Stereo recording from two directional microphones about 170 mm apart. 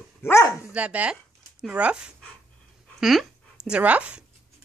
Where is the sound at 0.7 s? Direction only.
5° right (ahead or behind).